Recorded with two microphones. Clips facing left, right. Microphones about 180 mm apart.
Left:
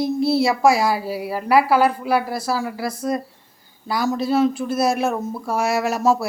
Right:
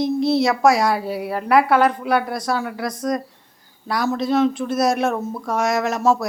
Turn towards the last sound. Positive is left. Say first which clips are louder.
# even
turn(degrees=10)  # may be behind; listen again after turning